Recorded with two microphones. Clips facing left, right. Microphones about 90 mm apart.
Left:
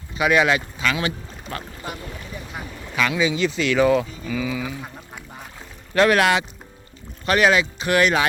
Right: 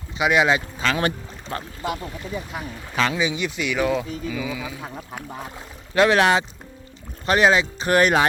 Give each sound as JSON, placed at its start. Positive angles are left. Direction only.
{"t": 0.2, "sound": "speech", "side_deg": -20}
{"t": 2.9, "sound": "speech", "side_deg": -35}
{"t": 3.2, "sound": "speech", "side_deg": -15}
{"t": 5.9, "sound": "speech", "side_deg": -20}